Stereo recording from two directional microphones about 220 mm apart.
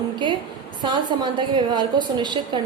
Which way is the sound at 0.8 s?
20° right (ahead or behind).